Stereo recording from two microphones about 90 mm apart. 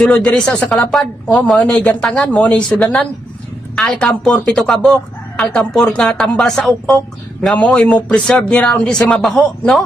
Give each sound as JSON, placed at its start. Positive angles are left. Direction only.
{"t": 0.0, "sound": "speech", "side_deg": 10}
{"t": 0.9, "sound": "speech", "side_deg": 0}
{"t": 1.3, "sound": "speech", "side_deg": 15}